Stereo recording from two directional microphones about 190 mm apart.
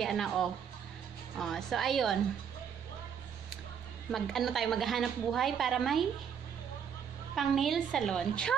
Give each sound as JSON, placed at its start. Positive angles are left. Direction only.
{"t": 0.0, "sound": "a woman's voice", "side_deg": 0}
{"t": 4.1, "sound": "a woman's voice", "side_deg": 0}
{"t": 7.3, "sound": "a woman's voice", "side_deg": 0}